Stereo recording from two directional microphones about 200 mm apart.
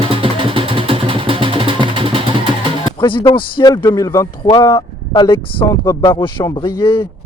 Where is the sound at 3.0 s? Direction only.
25° left (ahead or behind).